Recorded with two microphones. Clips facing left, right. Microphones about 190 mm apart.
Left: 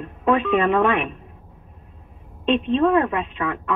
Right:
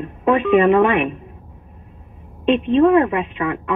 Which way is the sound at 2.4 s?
15° right (ahead or behind).